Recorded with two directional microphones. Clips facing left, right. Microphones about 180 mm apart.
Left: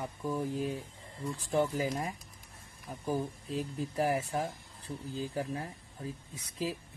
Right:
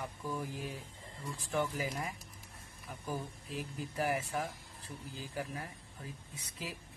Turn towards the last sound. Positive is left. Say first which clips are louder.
# left 9 dB
turn(degrees=35)  # may be behind; listen again after turning